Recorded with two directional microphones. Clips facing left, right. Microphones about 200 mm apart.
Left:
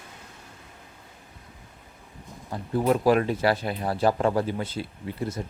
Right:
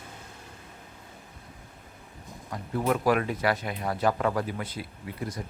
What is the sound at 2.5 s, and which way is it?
Speech, 30° left (ahead or behind).